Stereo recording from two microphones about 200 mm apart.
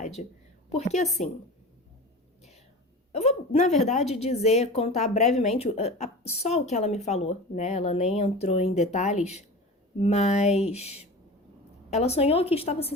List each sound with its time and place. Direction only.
0.0 s a woman's voice: 35° left (ahead or behind)
3.1 s a woman's voice: 30° left (ahead or behind)